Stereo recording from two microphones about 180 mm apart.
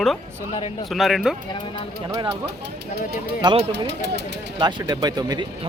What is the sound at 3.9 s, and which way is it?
Speech, 70° right (ahead or behind).